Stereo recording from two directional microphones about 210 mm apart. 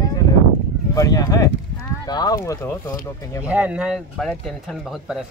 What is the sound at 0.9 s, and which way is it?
Speech, 15° left (ahead or behind).